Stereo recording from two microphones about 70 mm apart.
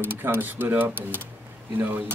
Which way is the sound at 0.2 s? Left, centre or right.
Right.